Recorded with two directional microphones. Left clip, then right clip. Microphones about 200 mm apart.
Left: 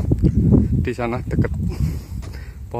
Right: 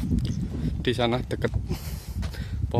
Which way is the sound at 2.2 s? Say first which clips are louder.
Right 1 dB; 10° right (ahead or behind).